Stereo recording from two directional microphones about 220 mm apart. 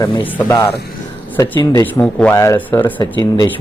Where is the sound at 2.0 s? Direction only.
5° left (ahead or behind).